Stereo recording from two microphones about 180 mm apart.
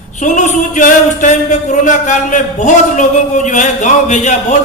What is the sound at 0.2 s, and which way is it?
A man's voice, 45° left (ahead or behind).